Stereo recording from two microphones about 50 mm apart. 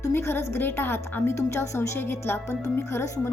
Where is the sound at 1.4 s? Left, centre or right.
Left.